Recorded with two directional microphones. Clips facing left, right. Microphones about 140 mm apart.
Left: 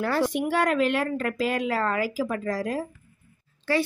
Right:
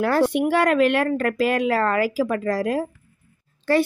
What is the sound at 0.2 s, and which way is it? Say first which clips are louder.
Speech: right 5 dB; 65° right (ahead or behind).